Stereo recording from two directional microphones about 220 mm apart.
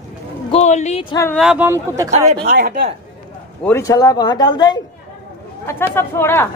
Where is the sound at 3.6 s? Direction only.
15° left (ahead or behind).